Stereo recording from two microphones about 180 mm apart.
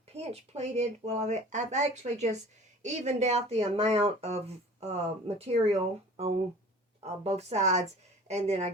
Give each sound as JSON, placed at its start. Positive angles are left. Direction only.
{"t": 0.1, "sound": "speech", "side_deg": -35}
{"t": 7.0, "sound": "speech", "side_deg": -35}